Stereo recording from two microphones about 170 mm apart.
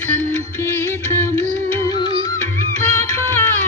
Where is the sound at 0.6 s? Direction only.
15° left (ahead or behind).